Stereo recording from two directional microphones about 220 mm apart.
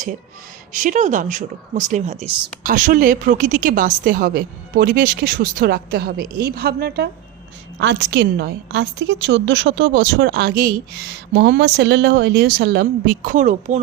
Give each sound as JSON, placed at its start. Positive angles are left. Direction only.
{"t": 0.7, "sound": "a woman's voice", "side_deg": -35}